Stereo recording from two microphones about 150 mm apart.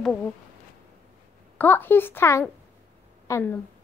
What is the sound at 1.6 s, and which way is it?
A woman's voice, 15° left (ahead or behind).